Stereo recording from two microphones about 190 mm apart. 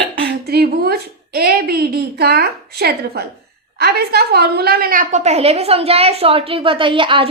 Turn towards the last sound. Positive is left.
turn(degrees=-25)  # may be behind; listen again after turning